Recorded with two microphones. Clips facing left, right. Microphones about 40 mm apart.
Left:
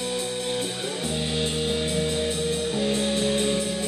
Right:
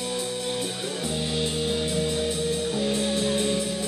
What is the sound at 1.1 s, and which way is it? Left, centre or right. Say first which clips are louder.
Music: even; left.